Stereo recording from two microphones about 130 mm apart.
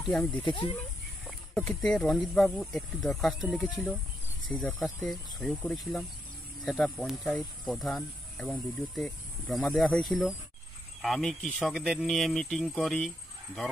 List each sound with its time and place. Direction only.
0.2 s speech: 10° left (ahead or behind)
0.5 s speech: 40° left (ahead or behind)
1.2 s speech: 5° left (ahead or behind)
11.7 s speech: centre (ahead or behind)